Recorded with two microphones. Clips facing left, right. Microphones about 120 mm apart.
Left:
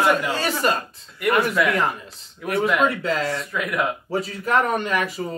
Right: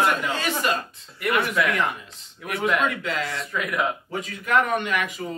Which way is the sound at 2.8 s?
35° left (ahead or behind).